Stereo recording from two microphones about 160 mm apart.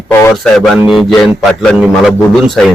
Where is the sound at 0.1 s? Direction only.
15° left (ahead or behind).